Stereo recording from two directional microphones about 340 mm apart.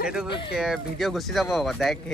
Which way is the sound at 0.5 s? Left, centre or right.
Centre.